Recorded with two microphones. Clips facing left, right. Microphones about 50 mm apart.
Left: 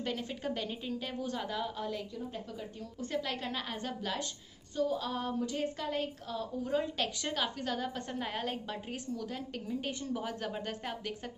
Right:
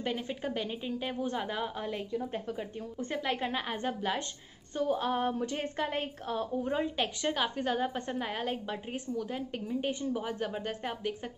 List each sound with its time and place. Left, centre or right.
0.0 s a woman's voice: centre
4.7 s a woman's voice: right
6.7 s a woman's voice: right
8.2 s a woman's voice: centre